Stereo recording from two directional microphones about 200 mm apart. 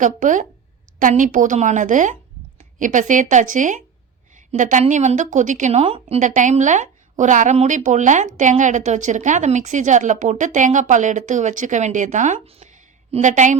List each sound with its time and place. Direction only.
0.0 s a woman's voice: 40° right (ahead or behind)